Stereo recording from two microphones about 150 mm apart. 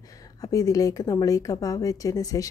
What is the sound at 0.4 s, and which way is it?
Speech, 25° left (ahead or behind).